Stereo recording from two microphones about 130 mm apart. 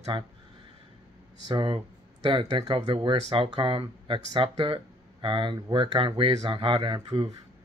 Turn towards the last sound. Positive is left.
turn(degrees=-40)  # may be behind; listen again after turning